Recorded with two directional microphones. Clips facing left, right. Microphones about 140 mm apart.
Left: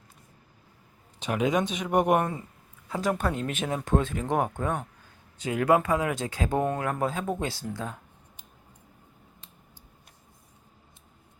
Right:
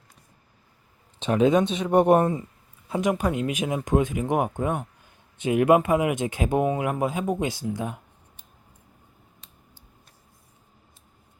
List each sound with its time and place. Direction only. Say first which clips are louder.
1.2 s speech: right 6 dB; 30° right (ahead or behind)
2.9 s speech: right 4 dB; 20° right (ahead or behind)